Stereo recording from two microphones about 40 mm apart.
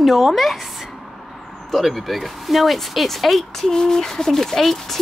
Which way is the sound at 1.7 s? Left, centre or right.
Centre.